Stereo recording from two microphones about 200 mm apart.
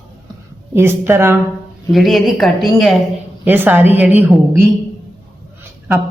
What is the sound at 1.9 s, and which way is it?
Speech, centre (ahead or behind).